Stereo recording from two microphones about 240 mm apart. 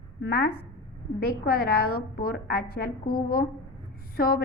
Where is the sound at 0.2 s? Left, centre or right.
Left.